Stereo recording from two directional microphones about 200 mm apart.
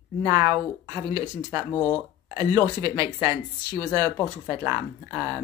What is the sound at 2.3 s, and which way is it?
Speech, 15° right (ahead or behind).